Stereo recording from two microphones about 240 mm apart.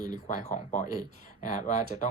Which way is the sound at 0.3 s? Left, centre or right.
Left.